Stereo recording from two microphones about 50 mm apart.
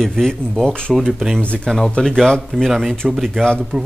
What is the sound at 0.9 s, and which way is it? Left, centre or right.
Speech, centre.